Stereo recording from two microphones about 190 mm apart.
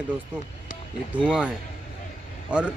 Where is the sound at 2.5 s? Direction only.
5° right (ahead or behind).